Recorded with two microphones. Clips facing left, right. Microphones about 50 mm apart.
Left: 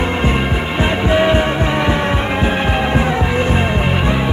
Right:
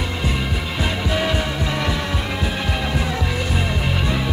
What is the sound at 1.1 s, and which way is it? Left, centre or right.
Music, left.